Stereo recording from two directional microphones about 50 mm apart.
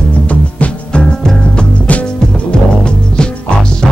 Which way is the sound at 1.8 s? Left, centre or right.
Left.